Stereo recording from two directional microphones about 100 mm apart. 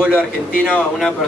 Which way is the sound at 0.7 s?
5° left (ahead or behind).